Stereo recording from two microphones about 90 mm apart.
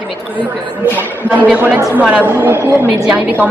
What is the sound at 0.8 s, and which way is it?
Speech, 20° left (ahead or behind).